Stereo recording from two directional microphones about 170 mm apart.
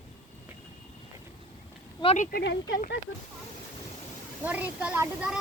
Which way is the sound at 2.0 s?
40° left (ahead or behind).